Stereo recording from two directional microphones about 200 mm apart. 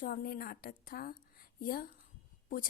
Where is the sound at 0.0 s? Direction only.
45° left (ahead or behind).